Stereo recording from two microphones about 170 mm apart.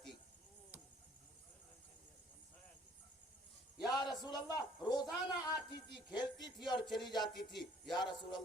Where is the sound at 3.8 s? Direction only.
25° left (ahead or behind).